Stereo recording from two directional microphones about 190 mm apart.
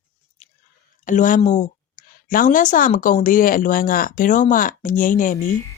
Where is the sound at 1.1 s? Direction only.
45° left (ahead or behind).